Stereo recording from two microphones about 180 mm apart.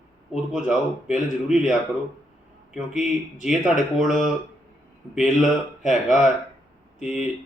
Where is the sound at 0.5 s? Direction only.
5° right (ahead or behind).